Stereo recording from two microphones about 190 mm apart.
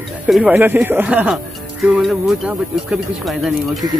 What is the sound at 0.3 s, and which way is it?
Speech, 5° right (ahead or behind).